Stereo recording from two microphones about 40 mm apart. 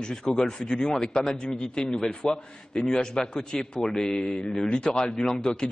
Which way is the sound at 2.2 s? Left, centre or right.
Left.